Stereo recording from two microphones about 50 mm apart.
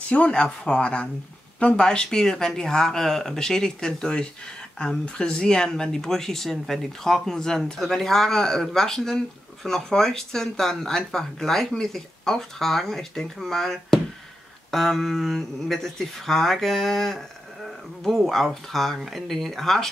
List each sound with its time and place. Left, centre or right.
0.1 s speech: left; by 19.9 s centre